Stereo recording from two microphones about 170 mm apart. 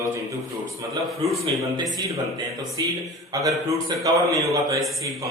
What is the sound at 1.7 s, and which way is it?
A man's voice, 20° right (ahead or behind).